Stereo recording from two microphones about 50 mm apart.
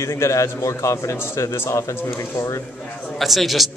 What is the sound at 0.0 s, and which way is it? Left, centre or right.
A man's voice, left.